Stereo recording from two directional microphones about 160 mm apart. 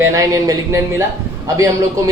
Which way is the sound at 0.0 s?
20° right (ahead or behind).